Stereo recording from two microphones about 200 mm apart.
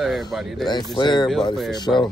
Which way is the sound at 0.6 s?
20° left (ahead or behind).